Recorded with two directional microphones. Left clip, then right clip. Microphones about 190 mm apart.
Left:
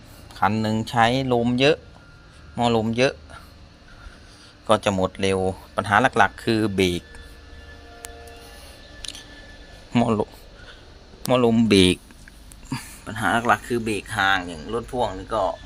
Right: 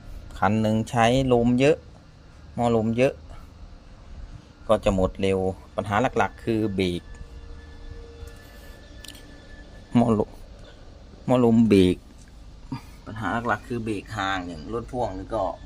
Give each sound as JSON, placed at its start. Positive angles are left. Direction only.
{"t": 0.3, "sound": "a man's voice", "side_deg": -20}
{"t": 4.7, "sound": "a man's voice", "side_deg": -20}
{"t": 5.4, "sound": "speech", "side_deg": 0}
{"t": 9.0, "sound": "music", "side_deg": -25}
{"t": 9.9, "sound": "speech", "side_deg": -20}
{"t": 11.3, "sound": "a man's voice", "side_deg": -20}
{"t": 12.7, "sound": "speech", "side_deg": 0}